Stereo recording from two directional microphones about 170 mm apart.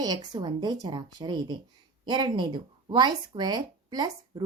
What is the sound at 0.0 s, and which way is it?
Speech, 20° right (ahead or behind).